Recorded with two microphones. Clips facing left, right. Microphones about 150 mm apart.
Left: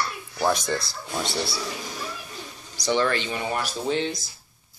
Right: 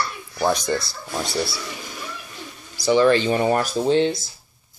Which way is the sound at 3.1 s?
40° right (ahead or behind).